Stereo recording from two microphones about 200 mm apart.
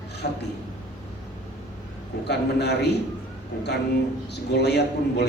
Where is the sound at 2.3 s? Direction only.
55° left (ahead or behind).